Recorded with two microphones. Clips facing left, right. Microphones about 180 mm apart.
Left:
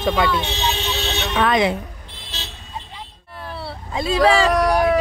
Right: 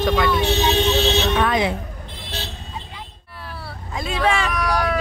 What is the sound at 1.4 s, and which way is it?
Speech, 85° left.